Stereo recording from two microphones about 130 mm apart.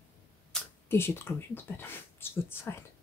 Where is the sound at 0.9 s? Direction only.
20° left (ahead or behind).